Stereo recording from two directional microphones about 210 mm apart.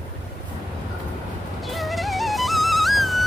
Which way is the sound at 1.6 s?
Centre (ahead or behind).